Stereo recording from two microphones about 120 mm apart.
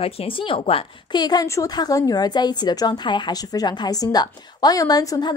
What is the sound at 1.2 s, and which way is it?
A woman's voice, 35° left (ahead or behind).